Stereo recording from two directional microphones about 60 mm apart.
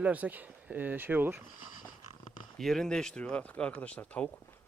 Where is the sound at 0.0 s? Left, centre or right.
Right.